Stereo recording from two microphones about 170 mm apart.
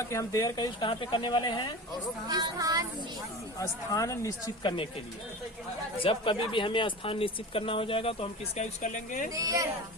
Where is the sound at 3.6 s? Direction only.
20° left (ahead or behind).